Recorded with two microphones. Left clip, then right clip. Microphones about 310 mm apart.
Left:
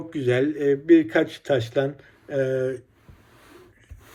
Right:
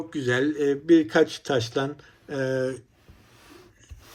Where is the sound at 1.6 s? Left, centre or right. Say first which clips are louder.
Left 3 dB; right.